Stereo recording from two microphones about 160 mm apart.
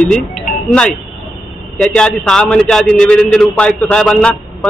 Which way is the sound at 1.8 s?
5° left (ahead or behind).